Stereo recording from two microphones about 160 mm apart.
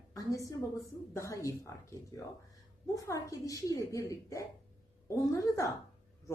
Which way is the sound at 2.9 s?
20° left (ahead or behind).